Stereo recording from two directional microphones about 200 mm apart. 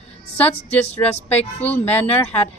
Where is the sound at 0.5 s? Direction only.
30° left (ahead or behind).